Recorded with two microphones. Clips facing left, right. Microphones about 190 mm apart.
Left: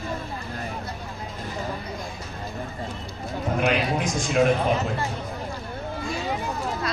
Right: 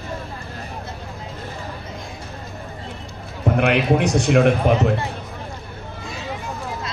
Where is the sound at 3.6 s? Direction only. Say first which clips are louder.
Right 6 dB; 70° right (ahead or behind).